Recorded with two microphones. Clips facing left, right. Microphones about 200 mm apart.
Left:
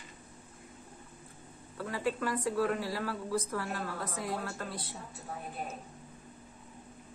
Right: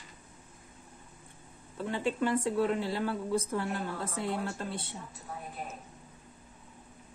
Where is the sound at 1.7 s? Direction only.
25° right (ahead or behind).